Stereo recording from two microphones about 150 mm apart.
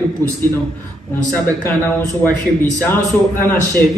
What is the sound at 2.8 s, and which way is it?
Speech, 15° left (ahead or behind).